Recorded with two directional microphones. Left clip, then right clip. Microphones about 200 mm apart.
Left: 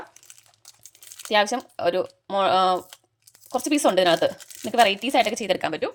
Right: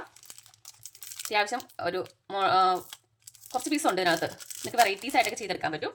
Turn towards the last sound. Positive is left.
turn(degrees=50)  # may be behind; listen again after turning